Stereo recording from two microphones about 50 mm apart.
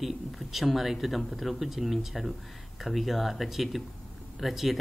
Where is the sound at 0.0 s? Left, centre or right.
Centre.